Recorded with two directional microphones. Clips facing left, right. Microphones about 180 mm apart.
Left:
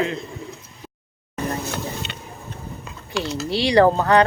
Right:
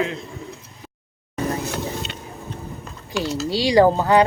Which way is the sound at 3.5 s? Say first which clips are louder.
Even; 10° right (ahead or behind).